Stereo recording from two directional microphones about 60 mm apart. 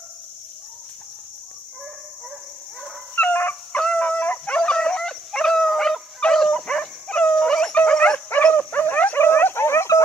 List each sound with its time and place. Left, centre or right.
3.2 s dog: left
3.7 s dog: centre
9.2 s dog: left